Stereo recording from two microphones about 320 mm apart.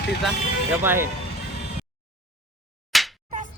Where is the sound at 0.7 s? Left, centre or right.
Centre.